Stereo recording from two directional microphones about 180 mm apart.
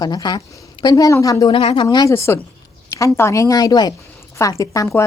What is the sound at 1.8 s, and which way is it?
A woman's voice, 20° left (ahead or behind).